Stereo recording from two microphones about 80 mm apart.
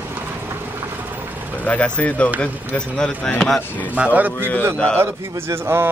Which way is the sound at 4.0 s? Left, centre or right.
Centre.